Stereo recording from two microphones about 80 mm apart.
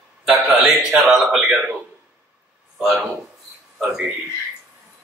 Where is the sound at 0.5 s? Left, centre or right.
Centre.